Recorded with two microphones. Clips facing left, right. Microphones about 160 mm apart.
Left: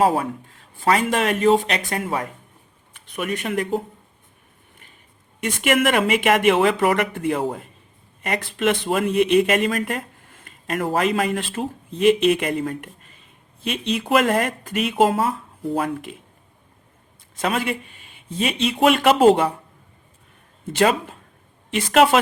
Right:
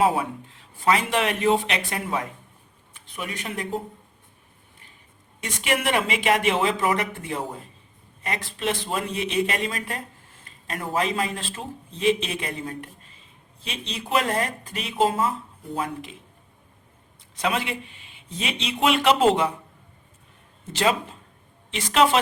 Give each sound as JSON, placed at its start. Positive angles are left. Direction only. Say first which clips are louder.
{"t": 0.9, "sound": "speech", "louder": "left 3 dB", "side_deg": 45}
{"t": 2.9, "sound": "speech", "louder": "left 7 dB", "side_deg": 60}
{"t": 5.4, "sound": "speech", "louder": "left 7 dB", "side_deg": 55}
{"t": 17.4, "sound": "speech", "louder": "left 3 dB", "side_deg": 45}
{"t": 20.7, "sound": "speech", "louder": "left 4 dB", "side_deg": 55}